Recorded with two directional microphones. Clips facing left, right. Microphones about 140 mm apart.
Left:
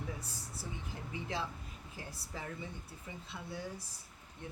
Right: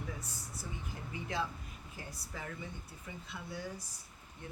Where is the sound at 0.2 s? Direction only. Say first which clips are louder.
Even; 30° left (ahead or behind).